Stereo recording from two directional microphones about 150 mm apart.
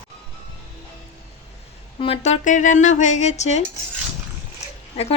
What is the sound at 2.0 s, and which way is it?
Speech, 45° left (ahead or behind).